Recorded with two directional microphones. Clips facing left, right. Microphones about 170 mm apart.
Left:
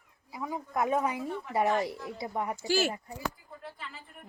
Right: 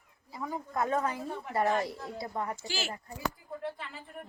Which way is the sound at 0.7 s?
20° left (ahead or behind).